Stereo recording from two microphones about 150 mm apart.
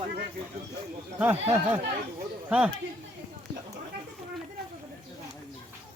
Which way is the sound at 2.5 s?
5° right (ahead or behind).